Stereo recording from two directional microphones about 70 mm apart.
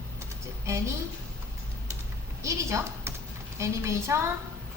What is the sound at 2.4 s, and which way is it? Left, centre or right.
A woman's voice, right.